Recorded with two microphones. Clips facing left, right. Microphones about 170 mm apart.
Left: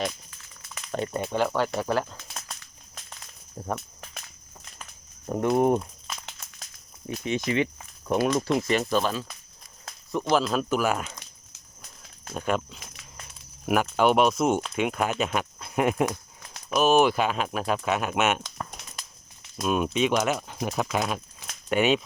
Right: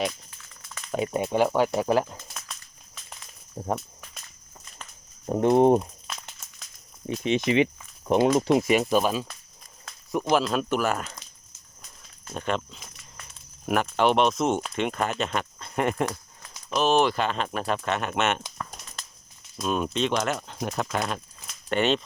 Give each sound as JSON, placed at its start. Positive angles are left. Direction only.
{"t": 0.9, "sound": "speech", "side_deg": -10}
{"t": 5.2, "sound": "speech", "side_deg": -25}
{"t": 7.1, "sound": "speech", "side_deg": -20}
{"t": 10.3, "sound": "speech", "side_deg": 0}
{"t": 12.3, "sound": "speech", "side_deg": 5}
{"t": 19.6, "sound": "speech", "side_deg": 10}